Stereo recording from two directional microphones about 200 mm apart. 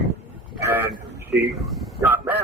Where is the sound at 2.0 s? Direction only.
10° right (ahead or behind).